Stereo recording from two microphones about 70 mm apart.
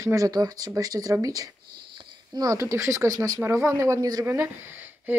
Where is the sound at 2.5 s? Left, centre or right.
Right.